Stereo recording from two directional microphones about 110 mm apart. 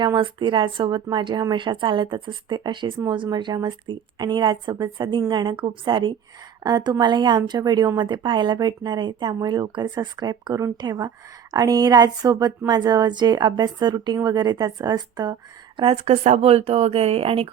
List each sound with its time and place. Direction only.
0.0 s a woman's voice: 45° right (ahead or behind)
16.0 s speech: 85° right; by 17.5 s 65° right (ahead or behind)